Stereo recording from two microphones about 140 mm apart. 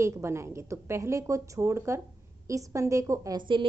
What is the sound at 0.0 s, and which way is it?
A woman's voice, 20° right (ahead or behind).